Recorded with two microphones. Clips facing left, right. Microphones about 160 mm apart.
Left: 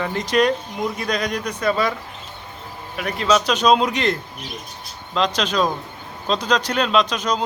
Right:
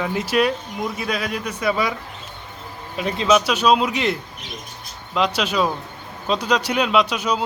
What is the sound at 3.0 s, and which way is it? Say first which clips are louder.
Speech: right 2 dB; 25° right (ahead or behind).